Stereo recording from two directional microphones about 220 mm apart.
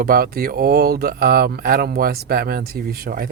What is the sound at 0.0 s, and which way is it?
Speech, 40° right (ahead or behind).